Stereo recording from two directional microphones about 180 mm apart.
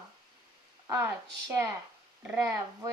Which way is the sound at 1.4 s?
15° right (ahead or behind).